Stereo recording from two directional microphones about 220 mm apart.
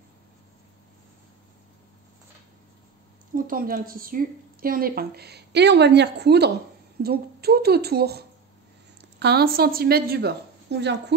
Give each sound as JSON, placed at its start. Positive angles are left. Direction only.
{"t": 3.3, "sound": "a woman's voice", "side_deg": -40}